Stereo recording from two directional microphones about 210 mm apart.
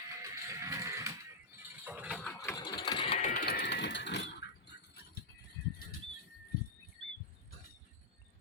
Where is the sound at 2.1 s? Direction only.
10° left (ahead or behind); by 5.2 s 50° left (ahead or behind).